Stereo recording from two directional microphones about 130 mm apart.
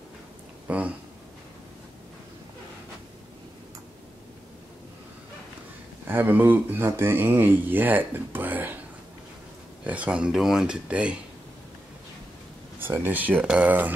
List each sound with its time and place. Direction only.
0.7 s speech: 10° right (ahead or behind)
6.0 s speech: 15° right (ahead or behind)
9.8 s speech: 10° right (ahead or behind)
12.7 s speech: 15° right (ahead or behind)